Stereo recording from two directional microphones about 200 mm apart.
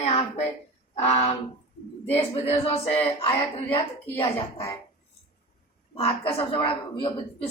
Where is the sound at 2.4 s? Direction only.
30° left (ahead or behind).